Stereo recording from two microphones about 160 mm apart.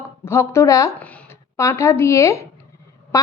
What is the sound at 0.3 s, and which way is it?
Speech, 15° left (ahead or behind).